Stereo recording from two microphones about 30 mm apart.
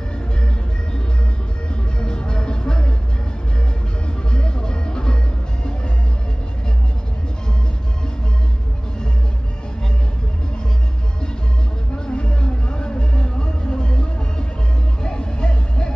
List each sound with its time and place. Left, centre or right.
2.0 s music: left
4.3 s music: left
12.1 s music: left
15.0 s music: left